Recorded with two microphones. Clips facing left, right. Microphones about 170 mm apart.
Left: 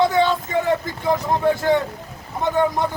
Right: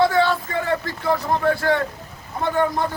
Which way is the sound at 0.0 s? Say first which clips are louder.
Even; 20° left (ahead or behind).